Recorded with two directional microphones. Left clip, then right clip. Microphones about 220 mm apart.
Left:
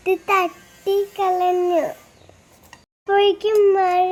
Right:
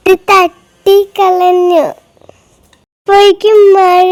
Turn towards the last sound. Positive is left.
turn(degrees=-55)  # may be behind; listen again after turning